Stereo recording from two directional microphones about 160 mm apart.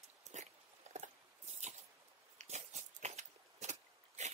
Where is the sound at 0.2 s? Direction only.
45° right (ahead or behind).